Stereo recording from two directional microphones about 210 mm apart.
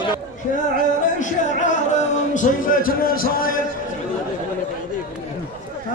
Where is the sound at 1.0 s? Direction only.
35° left (ahead or behind).